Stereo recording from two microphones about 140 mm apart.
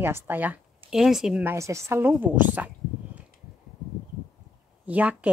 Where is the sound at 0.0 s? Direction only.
15° right (ahead or behind).